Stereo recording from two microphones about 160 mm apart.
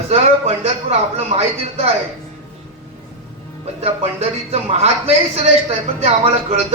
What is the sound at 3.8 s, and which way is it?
A man's voice, 40° right (ahead or behind).